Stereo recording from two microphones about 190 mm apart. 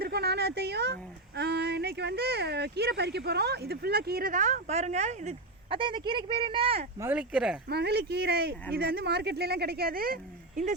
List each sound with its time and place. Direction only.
0.0 s a sound: 60° right (ahead or behind)
1.4 s speech: 60° right (ahead or behind); by 6.8 s 30° right (ahead or behind)
7.0 s speech: 5° right (ahead or behind)
7.7 s speech: 60° right (ahead or behind)